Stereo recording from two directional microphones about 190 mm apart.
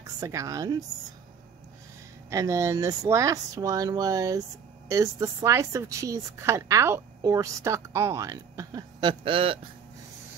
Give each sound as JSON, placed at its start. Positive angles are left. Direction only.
{"t": 0.0, "sound": "a woman's voice", "side_deg": -15}
{"t": 2.2, "sound": "a woman's voice", "side_deg": -15}